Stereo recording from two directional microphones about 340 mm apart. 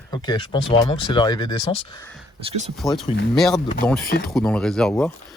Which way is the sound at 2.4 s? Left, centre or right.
Centre.